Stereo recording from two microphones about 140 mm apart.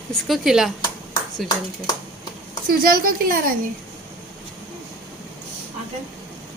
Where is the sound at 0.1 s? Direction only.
Centre (ahead or behind).